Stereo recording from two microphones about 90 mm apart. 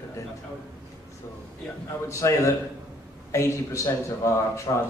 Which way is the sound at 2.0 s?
35° left (ahead or behind).